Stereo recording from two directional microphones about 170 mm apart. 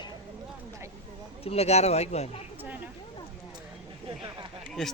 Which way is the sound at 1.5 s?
40° left (ahead or behind).